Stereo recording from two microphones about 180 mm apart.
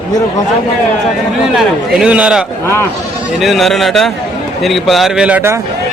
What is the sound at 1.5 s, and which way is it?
Speech, 5° right (ahead or behind).